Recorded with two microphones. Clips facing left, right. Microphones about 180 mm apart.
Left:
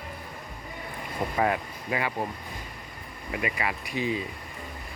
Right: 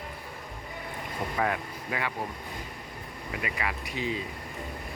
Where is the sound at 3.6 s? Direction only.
20° left (ahead or behind).